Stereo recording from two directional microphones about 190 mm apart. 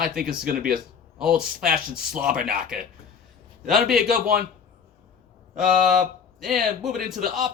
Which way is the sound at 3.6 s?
Centre (ahead or behind).